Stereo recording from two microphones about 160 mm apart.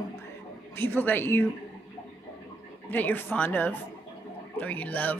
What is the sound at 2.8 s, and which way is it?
Speech, 10° left (ahead or behind).